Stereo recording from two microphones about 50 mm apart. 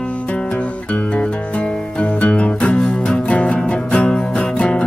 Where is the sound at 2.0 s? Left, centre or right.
Left.